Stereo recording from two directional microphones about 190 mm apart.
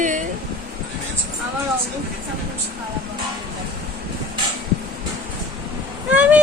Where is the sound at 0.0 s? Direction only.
40° right (ahead or behind).